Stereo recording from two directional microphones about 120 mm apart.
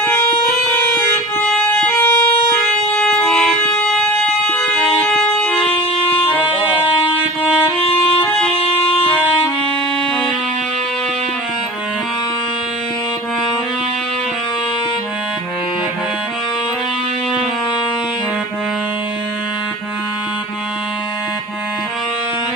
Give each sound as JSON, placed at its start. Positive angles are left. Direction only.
{"t": 0.7, "sound": "music", "side_deg": 20}
{"t": 6.4, "sound": "music", "side_deg": 45}
{"t": 8.2, "sound": "music", "side_deg": 15}